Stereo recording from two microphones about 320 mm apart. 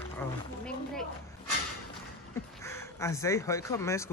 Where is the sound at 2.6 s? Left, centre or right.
Centre.